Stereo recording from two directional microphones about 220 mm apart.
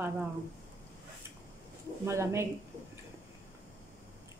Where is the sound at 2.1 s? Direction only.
10° right (ahead or behind).